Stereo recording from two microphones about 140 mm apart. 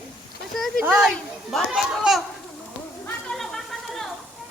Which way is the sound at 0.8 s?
5° right (ahead or behind).